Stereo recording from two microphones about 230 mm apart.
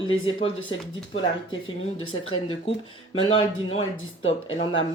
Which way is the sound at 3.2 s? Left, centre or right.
Left.